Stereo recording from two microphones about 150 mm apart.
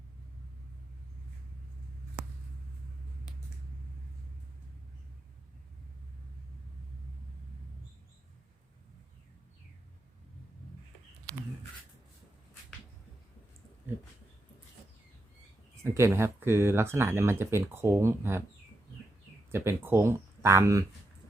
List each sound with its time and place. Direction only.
15.8 s speech: 15° right (ahead or behind)
19.5 s speech: 15° right (ahead or behind)